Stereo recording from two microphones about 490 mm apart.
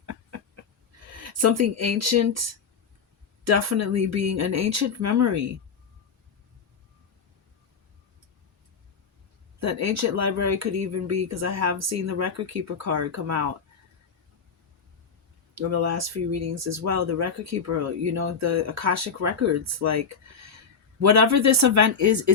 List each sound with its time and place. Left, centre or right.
0.0 s a sound: right
3.4 s speech: right
9.6 s speech: right
15.5 s speech: right